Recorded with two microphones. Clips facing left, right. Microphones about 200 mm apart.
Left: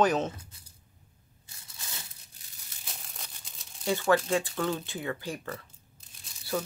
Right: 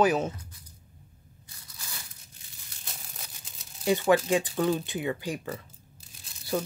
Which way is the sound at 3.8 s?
15° right (ahead or behind).